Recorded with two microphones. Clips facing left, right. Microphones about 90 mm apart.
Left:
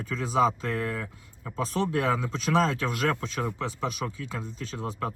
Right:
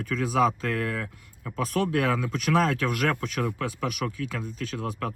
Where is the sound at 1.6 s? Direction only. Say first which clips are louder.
Right 2 dB; 60° right (ahead or behind).